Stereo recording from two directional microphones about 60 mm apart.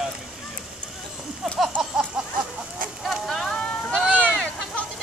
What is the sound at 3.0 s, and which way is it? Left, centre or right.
Boat, centre.